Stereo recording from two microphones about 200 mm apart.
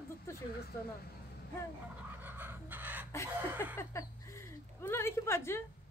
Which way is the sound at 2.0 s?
10° right (ahead or behind).